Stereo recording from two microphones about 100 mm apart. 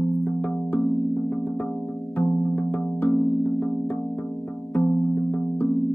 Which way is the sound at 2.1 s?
15° left (ahead or behind).